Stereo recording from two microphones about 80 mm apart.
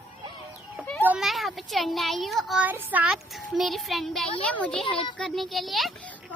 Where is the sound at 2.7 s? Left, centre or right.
Right.